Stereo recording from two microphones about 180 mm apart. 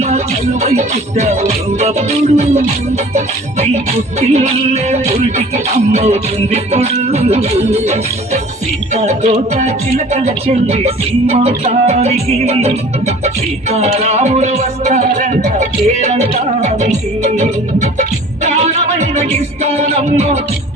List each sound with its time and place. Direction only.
0.6 s music: 40° right (ahead or behind)
4.2 s music: 35° right (ahead or behind)